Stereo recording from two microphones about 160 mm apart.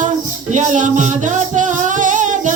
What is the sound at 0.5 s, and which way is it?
Music, 50° right (ahead or behind).